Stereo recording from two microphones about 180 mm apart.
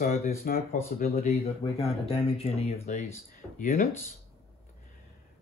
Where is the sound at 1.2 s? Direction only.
30° left (ahead or behind).